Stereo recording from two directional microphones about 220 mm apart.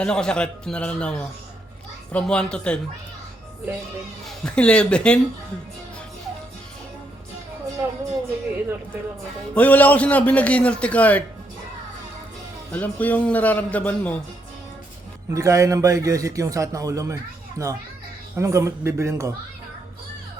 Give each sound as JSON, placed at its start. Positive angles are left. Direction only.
{"t": 0.0, "sound": "a man's voice", "side_deg": 5}
{"t": 4.3, "sound": "a man's voice", "side_deg": 5}
{"t": 7.8, "sound": "music", "side_deg": -10}
{"t": 9.6, "sound": "a man's voice", "side_deg": 5}
{"t": 12.7, "sound": "a man's voice", "side_deg": 5}
{"t": 15.3, "sound": "a man's voice", "side_deg": -15}